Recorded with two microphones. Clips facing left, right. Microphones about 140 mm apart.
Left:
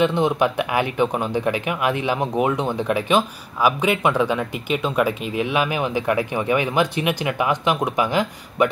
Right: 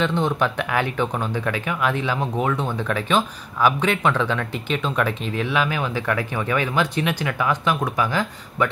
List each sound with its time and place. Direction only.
0.0 s speech: 15° left (ahead or behind)